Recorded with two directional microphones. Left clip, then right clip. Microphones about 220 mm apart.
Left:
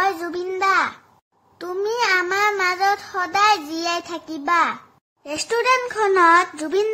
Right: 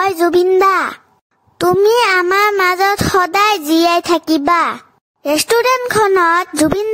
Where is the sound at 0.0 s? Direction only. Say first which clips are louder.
Right 10 dB; 50° right (ahead or behind).